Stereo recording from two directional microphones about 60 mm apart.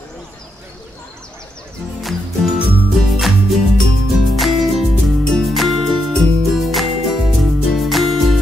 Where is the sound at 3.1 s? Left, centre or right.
Centre.